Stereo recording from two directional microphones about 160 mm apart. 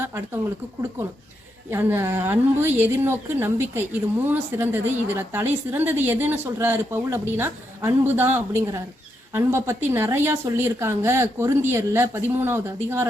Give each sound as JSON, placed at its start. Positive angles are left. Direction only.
{"t": 1.7, "sound": "a woman's voice", "side_deg": -15}